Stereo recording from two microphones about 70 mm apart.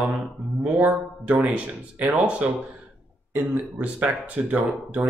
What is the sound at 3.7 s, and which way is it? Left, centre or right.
Speech, centre.